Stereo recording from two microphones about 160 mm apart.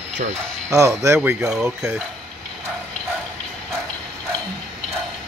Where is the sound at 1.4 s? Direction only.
5° right (ahead or behind).